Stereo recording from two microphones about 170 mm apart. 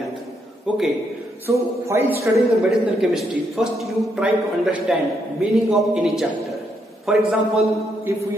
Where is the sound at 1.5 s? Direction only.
15° right (ahead or behind).